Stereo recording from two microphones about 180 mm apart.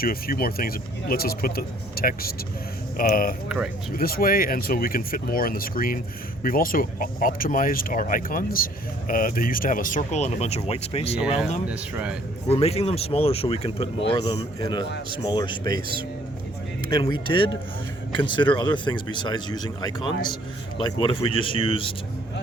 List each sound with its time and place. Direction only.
0.0 s speech: 55° left (ahead or behind); by 11.2 s 35° left (ahead or behind)
11.2 s speech: 5° right (ahead or behind)
12.5 s speech: 35° left (ahead or behind)
17.3 s speech: 30° left (ahead or behind)